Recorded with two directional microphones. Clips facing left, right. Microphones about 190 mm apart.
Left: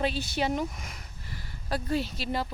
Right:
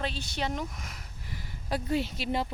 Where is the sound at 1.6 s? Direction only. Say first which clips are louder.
Even; 20° right (ahead or behind).